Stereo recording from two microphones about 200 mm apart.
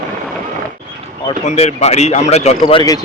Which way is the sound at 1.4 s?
30° left (ahead or behind).